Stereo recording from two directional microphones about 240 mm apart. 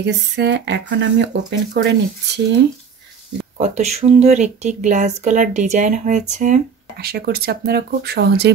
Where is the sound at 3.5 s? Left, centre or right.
Right.